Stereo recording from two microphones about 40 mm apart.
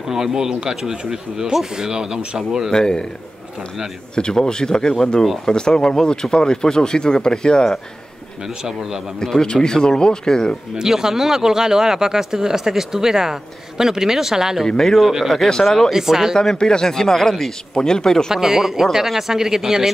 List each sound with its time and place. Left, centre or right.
0.1 s speech: centre
2.7 s speech: centre
4.1 s speech: centre
5.2 s speech: centre
5.5 s speech: centre
9.2 s speech: centre
10.8 s speech: centre
14.7 s speech: centre
15.0 s speech: centre
16.3 s speech: centre
18.3 s speech: centre